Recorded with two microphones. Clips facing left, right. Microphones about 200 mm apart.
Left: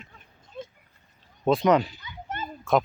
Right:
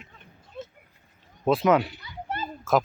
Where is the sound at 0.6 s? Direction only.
5° right (ahead or behind).